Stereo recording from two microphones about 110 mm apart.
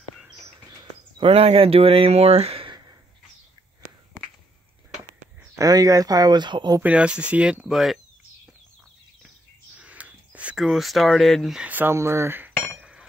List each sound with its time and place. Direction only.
1.1 s speech: 60° right (ahead or behind)
5.6 s speech: 30° right (ahead or behind)
6.8 s speech: 10° right (ahead or behind)
9.8 s a sound: 10° right (ahead or behind)
10.6 s speech: centre (ahead or behind)
11.6 s speech: 15° right (ahead or behind)